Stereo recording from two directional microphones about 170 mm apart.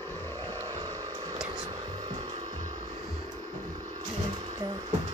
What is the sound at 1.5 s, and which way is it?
Whispering, 25° right (ahead or behind).